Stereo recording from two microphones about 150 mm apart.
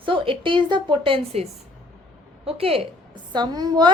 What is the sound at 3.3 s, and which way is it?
Speech, 30° right (ahead or behind).